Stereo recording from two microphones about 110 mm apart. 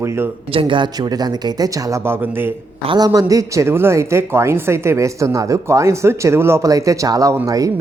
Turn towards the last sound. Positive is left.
turn(degrees=-30)  # may be behind; listen again after turning